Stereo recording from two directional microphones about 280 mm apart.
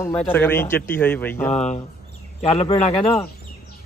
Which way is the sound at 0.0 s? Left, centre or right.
Centre.